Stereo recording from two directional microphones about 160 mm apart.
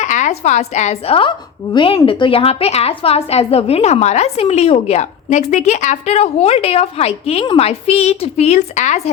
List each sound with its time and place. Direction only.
0.0 s a woman's voice: 50° left (ahead or behind)